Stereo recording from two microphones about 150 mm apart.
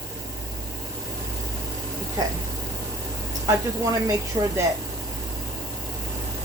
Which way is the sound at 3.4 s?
20° right (ahead or behind).